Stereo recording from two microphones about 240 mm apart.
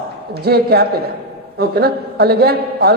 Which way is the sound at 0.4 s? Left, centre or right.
Right.